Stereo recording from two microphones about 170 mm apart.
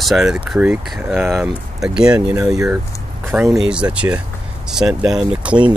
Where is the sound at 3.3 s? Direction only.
15° right (ahead or behind).